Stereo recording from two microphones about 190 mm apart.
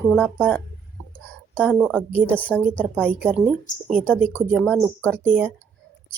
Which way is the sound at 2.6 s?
5° left (ahead or behind).